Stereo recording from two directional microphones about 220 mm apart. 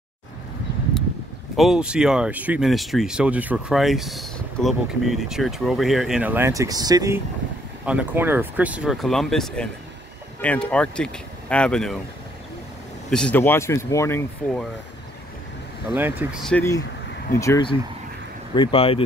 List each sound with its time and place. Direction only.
1.6 s speech: 5° right (ahead or behind)
7.8 s speech: 5° right (ahead or behind)
13.1 s speech: 5° left (ahead or behind)
15.9 s speech: 10° right (ahead or behind)
16.4 s speech: 10° left (ahead or behind)